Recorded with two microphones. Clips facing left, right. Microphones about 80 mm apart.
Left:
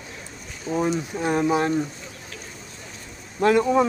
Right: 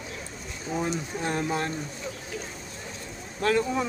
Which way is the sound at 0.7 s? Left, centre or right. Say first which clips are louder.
Left 6 dB; centre.